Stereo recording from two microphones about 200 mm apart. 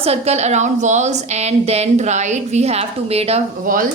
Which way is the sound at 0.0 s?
30° right (ahead or behind).